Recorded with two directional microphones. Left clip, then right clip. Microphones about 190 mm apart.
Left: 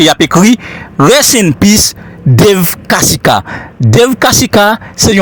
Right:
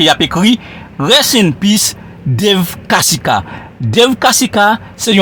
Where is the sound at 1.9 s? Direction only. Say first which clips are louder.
Left 5 dB; 25° left (ahead or behind).